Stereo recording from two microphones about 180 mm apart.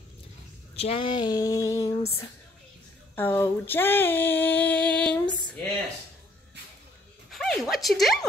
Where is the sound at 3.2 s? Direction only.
15° left (ahead or behind).